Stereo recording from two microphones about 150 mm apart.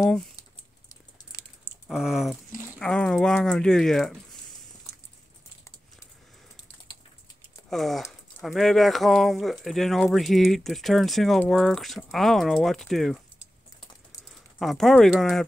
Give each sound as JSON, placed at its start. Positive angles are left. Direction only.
{"t": 0.4, "sound": "typing", "side_deg": 20}
{"t": 1.9, "sound": "speech", "side_deg": -5}
{"t": 7.7, "sound": "speech", "side_deg": 0}
{"t": 14.6, "sound": "speech", "side_deg": 0}